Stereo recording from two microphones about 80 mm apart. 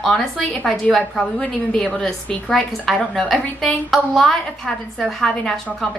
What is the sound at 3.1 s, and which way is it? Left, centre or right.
A woman's voice, centre.